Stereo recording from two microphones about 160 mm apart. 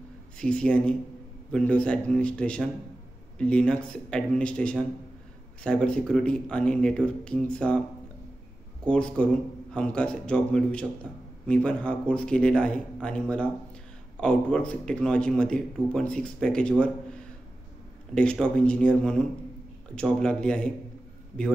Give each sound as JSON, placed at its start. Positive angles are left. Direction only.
{"t": 0.4, "sound": "a man's voice", "side_deg": 5}
{"t": 8.8, "sound": "a man's voice", "side_deg": 5}